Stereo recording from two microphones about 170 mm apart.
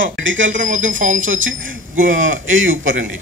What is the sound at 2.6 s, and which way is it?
Speech, 90° right.